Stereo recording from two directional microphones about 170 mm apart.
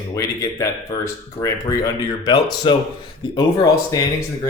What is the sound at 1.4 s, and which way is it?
Speech, 20° left (ahead or behind).